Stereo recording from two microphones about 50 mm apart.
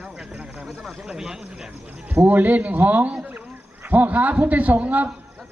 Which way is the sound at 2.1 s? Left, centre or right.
Right.